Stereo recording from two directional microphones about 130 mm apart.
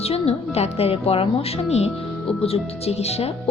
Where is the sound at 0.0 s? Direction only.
50° left (ahead or behind).